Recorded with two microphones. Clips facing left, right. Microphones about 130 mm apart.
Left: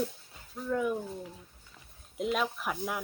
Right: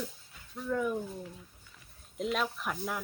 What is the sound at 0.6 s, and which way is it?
Speech, 10° left (ahead or behind).